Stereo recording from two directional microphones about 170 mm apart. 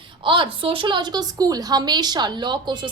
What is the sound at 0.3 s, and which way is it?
A woman's voice, 30° right (ahead or behind).